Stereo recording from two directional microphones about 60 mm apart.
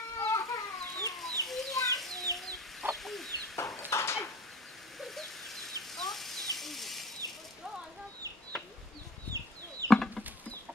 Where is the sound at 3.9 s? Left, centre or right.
Left.